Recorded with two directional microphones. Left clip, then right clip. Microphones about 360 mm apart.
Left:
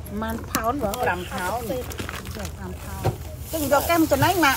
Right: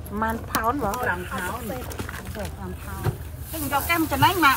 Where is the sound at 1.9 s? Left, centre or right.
Centre.